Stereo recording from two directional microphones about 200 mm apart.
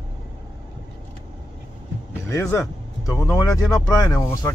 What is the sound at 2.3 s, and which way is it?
A man's voice, 15° left (ahead or behind).